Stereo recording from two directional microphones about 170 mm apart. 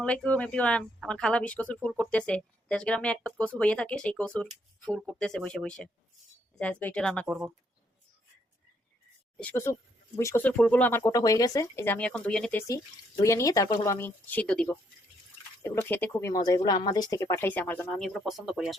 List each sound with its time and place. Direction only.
0.0 s speech: 5° left (ahead or behind)
7.3 s speech: 5° right (ahead or behind)
9.4 s speech: 10° left (ahead or behind)
11.0 s speech: 20° left (ahead or behind)
13.2 s speech: 20° left (ahead or behind)
15.6 s speech: 15° left (ahead or behind); by 18.8 s centre (ahead or behind)